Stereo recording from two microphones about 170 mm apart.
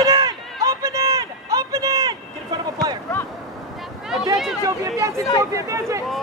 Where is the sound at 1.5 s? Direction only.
20° right (ahead or behind).